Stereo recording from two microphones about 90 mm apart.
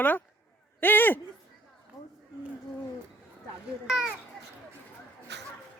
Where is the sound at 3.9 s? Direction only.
5° right (ahead or behind).